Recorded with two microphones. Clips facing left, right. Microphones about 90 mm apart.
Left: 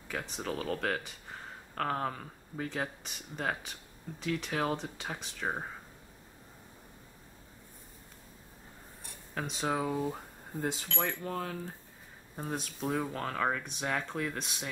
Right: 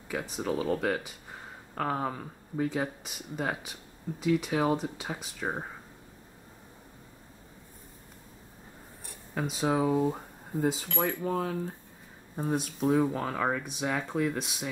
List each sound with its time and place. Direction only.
0.1 s speech: 5° right (ahead or behind)
9.0 s cutlery: 5° right (ahead or behind)
9.9 s speech: 20° right (ahead or behind)
10.6 s speech: centre (ahead or behind)